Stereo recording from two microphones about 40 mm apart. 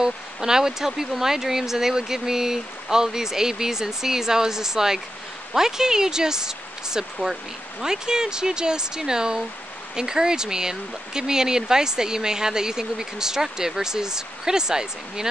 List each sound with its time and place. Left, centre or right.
0.0 s speech: centre